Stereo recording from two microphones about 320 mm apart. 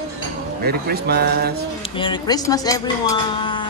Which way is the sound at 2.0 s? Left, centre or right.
Centre.